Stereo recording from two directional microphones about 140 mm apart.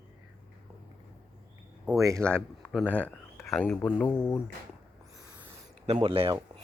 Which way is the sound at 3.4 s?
5° left (ahead or behind).